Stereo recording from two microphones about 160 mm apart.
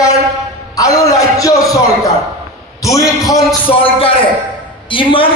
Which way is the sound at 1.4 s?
20° left (ahead or behind).